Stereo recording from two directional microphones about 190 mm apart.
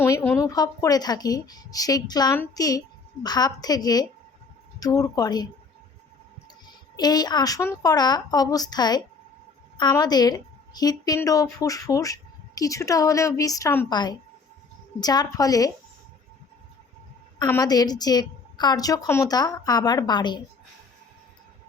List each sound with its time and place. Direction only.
0.0 s a woman's voice: 10° left (ahead or behind)
6.9 s a woman's voice: 20° left (ahead or behind)
17.4 s a woman's voice: 20° left (ahead or behind)